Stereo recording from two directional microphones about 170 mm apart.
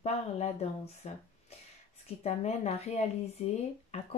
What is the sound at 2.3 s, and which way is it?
Speech, 40° left (ahead or behind).